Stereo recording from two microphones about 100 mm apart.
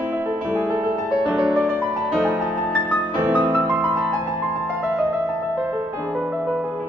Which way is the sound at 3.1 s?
20° right (ahead or behind).